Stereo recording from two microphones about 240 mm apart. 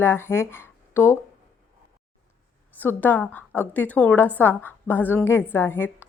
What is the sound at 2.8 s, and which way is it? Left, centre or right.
A woman's voice, centre.